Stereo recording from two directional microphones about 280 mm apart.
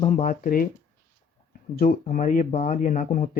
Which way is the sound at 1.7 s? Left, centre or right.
Left.